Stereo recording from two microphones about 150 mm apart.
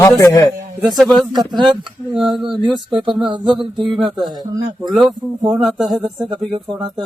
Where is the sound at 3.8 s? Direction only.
Centre (ahead or behind).